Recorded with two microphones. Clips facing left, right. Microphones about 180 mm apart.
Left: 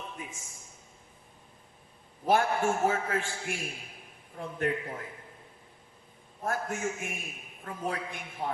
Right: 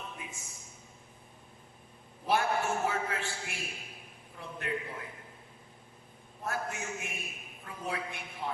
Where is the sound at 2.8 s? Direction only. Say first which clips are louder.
Left 5 dB; 45° left (ahead or behind).